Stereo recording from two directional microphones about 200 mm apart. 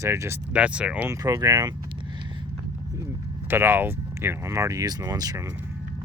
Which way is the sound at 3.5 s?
10° right (ahead or behind).